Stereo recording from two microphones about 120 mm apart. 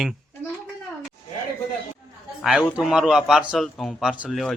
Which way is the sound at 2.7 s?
5° right (ahead or behind).